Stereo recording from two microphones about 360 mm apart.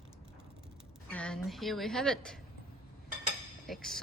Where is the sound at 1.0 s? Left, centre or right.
Centre.